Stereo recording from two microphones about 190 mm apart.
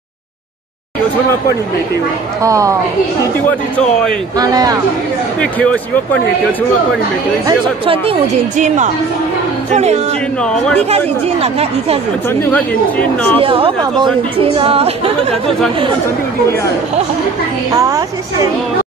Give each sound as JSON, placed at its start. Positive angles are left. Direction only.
{"t": 2.4, "sound": "a woman's voice", "side_deg": -15}
{"t": 3.4, "sound": "speech", "side_deg": 5}
{"t": 4.4, "sound": "speech", "side_deg": -20}
{"t": 5.4, "sound": "speech", "side_deg": 5}
{"t": 7.4, "sound": "speech", "side_deg": -25}
{"t": 10.4, "sound": "speech", "side_deg": 5}
{"t": 12.3, "sound": "speech", "side_deg": 10}
{"t": 13.4, "sound": "speech", "side_deg": -30}
{"t": 17.7, "sound": "a woman's voice", "side_deg": -15}